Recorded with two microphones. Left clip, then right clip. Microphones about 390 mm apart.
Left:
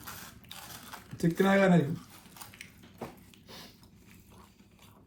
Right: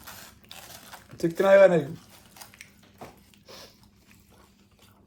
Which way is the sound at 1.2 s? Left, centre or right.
Centre.